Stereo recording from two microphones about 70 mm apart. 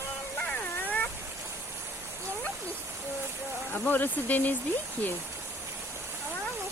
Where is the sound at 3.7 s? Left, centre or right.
Left.